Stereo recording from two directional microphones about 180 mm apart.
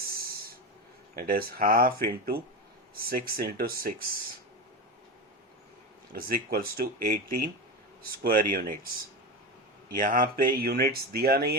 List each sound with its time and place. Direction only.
1.1 s speech: 55° right (ahead or behind)
6.1 s speech: 55° right (ahead or behind)
9.9 s speech: 50° right (ahead or behind)